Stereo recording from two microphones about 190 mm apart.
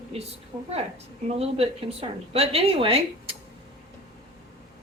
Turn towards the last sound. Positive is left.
turn(degrees=-30)  # may be behind; listen again after turning